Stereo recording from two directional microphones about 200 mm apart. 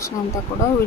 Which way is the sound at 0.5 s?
25° left (ahead or behind).